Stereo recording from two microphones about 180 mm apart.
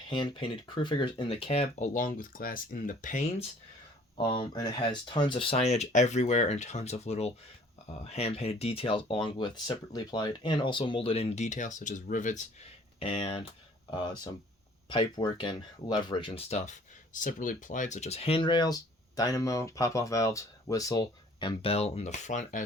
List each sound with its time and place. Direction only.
0.1 s speech: 25° left (ahead or behind); by 3.4 s 40° left (ahead or behind)
4.2 s speech: 25° left (ahead or behind); by 12.4 s 45° left (ahead or behind)
13.0 s speech: 35° left (ahead or behind)
14.8 s speech: 25° left (ahead or behind); by 22.6 s 40° left (ahead or behind)